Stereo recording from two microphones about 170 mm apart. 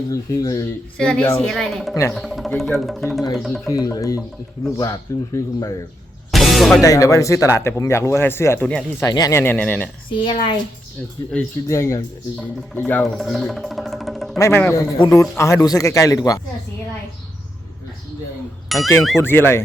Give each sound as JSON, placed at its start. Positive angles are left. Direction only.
{"t": 0.1, "sound": "a man's voice", "side_deg": 20}
{"t": 0.9, "sound": "speech", "side_deg": 5}
{"t": 3.7, "sound": "a man's voice", "side_deg": 20}
{"t": 6.3, "sound": "music", "side_deg": 0}
{"t": 6.8, "sound": "speech", "side_deg": 20}
{"t": 9.0, "sound": "speech", "side_deg": 20}
{"t": 10.1, "sound": "speech", "side_deg": 30}
{"t": 11.7, "sound": "speech", "side_deg": 15}
{"t": 13.1, "sound": "music", "side_deg": 0}
{"t": 14.3, "sound": "a man's voice", "side_deg": 15}
{"t": 18.7, "sound": "speech", "side_deg": 0}
{"t": 19.2, "sound": "speech", "side_deg": 15}